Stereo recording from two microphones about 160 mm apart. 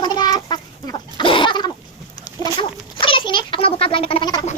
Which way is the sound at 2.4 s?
25° left (ahead or behind).